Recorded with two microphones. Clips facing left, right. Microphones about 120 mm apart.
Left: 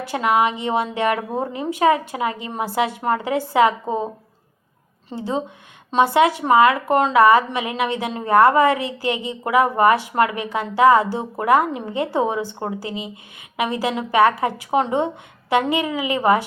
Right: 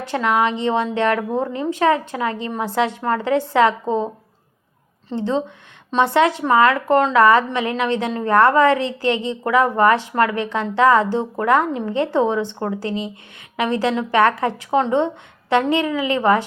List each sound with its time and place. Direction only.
0.1 s speech: 10° left (ahead or behind)